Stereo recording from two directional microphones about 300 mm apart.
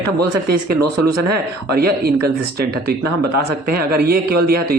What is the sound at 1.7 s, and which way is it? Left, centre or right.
A man's voice, right.